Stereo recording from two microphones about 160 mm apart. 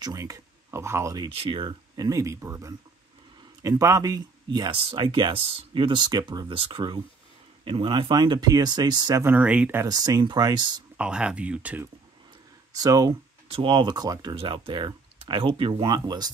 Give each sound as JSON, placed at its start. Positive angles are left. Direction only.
{"t": 0.0, "sound": "speech", "side_deg": -20}
{"t": 1.3, "sound": "speech", "side_deg": -35}
{"t": 9.2, "sound": "speech", "side_deg": -10}
{"t": 9.8, "sound": "speech", "side_deg": -25}
{"t": 11.0, "sound": "speech", "side_deg": -5}
{"t": 12.7, "sound": "speech", "side_deg": -25}